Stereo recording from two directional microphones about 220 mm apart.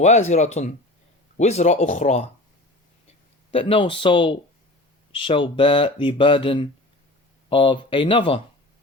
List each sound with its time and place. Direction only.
0.0 s speech: 30° left (ahead or behind)
3.5 s speech: 25° left (ahead or behind)